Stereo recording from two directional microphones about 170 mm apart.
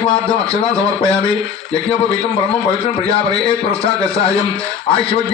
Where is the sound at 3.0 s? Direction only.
35° left (ahead or behind).